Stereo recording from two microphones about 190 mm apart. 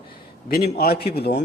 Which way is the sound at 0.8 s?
55° left (ahead or behind).